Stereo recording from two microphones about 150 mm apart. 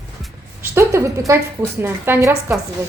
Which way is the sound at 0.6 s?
20° right (ahead or behind).